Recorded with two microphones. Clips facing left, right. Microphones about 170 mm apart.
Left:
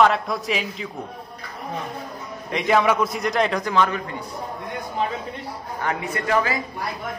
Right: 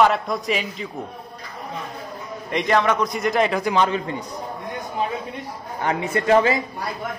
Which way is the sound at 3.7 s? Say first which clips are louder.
Left 1 dB; 25° right (ahead or behind).